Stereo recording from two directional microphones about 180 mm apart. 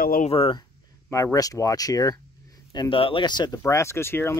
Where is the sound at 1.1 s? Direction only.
20° left (ahead or behind).